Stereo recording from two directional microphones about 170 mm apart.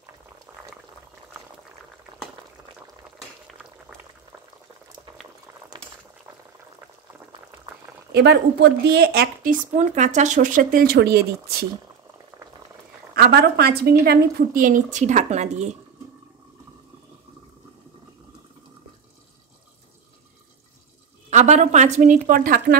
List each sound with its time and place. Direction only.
0.5 s boiling: 10° right (ahead or behind)
8.1 s speech: 75° right (ahead or behind)
13.1 s speech: 65° right (ahead or behind); by 15.8 s 40° right (ahead or behind)
21.3 s a woman's voice: 45° right (ahead or behind)